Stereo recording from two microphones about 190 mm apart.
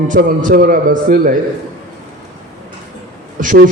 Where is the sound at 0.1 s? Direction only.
45° right (ahead or behind).